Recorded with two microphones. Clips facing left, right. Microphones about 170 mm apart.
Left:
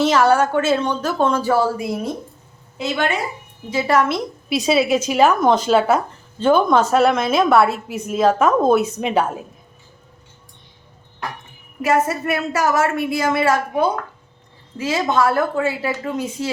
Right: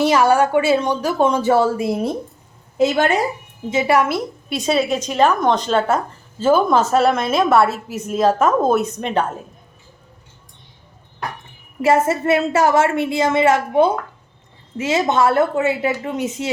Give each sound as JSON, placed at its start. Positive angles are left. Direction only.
{"t": 0.0, "sound": "speech", "side_deg": -10}
{"t": 2.7, "sound": "a woman's voice", "side_deg": -45}
{"t": 3.7, "sound": "speech", "side_deg": -15}
{"t": 4.4, "sound": "a woman's voice", "side_deg": 0}
{"t": 11.8, "sound": "a woman's voice", "side_deg": -25}